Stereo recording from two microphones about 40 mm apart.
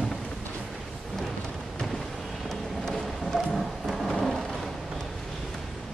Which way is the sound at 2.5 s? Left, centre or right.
Centre.